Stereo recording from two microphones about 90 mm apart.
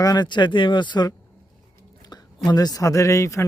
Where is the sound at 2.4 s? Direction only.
45° left (ahead or behind).